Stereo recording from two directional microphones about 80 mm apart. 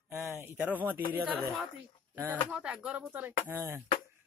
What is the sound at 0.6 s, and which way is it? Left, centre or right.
Speech, right.